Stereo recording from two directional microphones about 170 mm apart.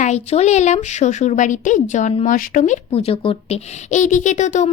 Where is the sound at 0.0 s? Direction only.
40° left (ahead or behind).